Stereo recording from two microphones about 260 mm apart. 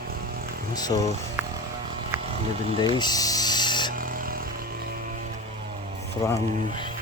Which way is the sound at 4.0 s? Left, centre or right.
Right.